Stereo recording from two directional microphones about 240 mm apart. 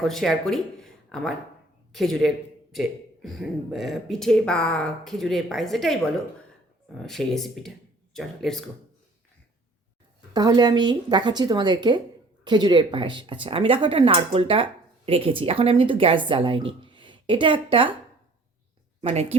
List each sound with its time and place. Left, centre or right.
0.0 s a man's voice: centre
10.3 s speech: centre
19.0 s speech: right